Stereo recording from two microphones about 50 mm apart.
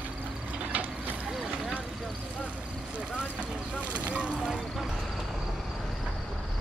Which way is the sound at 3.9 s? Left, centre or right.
Right.